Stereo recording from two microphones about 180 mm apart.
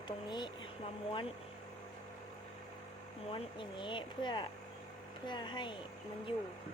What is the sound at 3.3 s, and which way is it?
Speech, 25° left (ahead or behind).